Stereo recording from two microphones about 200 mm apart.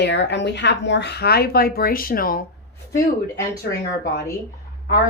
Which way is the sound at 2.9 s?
15° left (ahead or behind).